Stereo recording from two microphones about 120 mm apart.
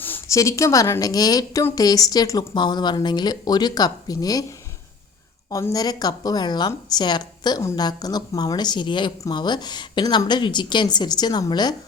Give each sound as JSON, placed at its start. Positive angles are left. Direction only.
{"t": 0.0, "sound": "a sound", "side_deg": 15}
{"t": 0.3, "sound": "a woman's voice", "side_deg": 25}
{"t": 5.5, "sound": "a woman's voice", "side_deg": 30}